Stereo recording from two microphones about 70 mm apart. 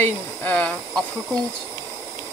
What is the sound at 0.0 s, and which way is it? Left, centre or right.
Speech, left.